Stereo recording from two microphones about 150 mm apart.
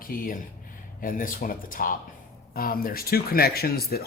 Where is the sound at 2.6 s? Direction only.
75° left (ahead or behind).